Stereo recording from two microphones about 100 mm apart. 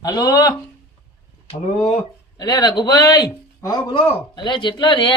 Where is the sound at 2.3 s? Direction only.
40° left (ahead or behind).